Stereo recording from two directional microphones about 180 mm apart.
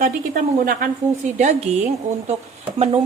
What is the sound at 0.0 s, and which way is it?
A woman's voice, 50° right (ahead or behind).